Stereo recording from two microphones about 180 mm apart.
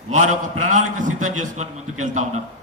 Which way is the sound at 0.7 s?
45° right (ahead or behind).